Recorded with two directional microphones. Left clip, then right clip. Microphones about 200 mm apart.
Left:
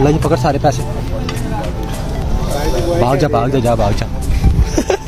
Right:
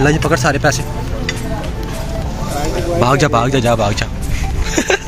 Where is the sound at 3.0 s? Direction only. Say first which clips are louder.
Right 2 dB; 10° right (ahead or behind).